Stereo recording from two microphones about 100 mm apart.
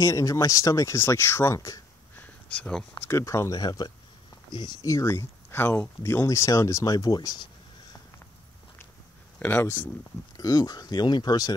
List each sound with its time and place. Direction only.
0.0 s speech: 35° left (ahead or behind)
2.1 s a sound: 15° left (ahead or behind)
3.1 s speech: 30° left (ahead or behind); by 4.7 s 50° left (ahead or behind)
4.8 s speech: 30° left (ahead or behind); by 7.4 s 45° left (ahead or behind)
9.4 s speech: 20° left (ahead or behind)
10.3 s speech: 40° left (ahead or behind)